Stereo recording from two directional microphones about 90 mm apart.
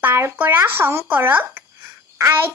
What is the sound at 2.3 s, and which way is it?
Speech, 25° right (ahead or behind).